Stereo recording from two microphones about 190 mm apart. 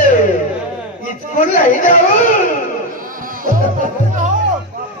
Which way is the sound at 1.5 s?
40° left (ahead or behind).